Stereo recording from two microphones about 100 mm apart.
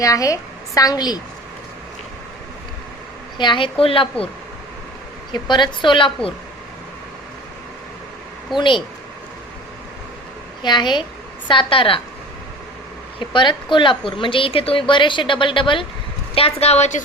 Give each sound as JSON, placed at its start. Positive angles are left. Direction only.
{"t": 0.0, "sound": "a woman's voice", "side_deg": 35}
{"t": 3.3, "sound": "a woman's voice", "side_deg": 50}
{"t": 5.3, "sound": "a woman's voice", "side_deg": 50}
{"t": 8.5, "sound": "a woman's voice", "side_deg": 55}
{"t": 10.6, "sound": "a woman's voice", "side_deg": 50}
{"t": 13.1, "sound": "a woman's voice", "side_deg": 55}
{"t": 16.3, "sound": "a woman's voice", "side_deg": 75}